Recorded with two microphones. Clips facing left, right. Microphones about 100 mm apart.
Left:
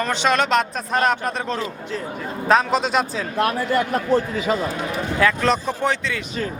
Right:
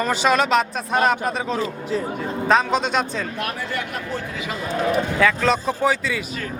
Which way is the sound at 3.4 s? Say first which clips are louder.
Left 7 dB; 40° left (ahead or behind).